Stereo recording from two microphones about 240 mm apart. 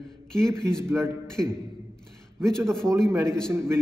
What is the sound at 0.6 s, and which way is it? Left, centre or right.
Speech, centre.